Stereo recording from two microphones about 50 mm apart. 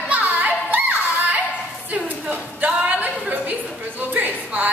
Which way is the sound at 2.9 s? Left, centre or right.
Right.